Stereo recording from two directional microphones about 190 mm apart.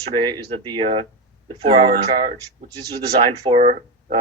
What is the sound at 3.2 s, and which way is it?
Speech, 25° right (ahead or behind).